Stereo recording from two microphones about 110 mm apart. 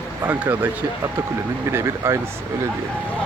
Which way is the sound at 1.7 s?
25° right (ahead or behind).